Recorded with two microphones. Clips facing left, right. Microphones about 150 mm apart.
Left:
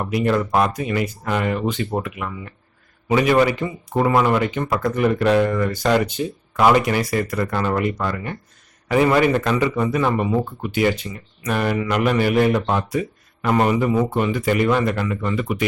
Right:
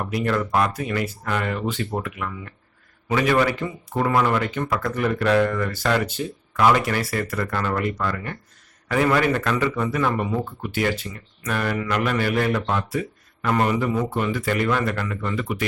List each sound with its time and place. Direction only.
0.1 s speech: 15° left (ahead or behind)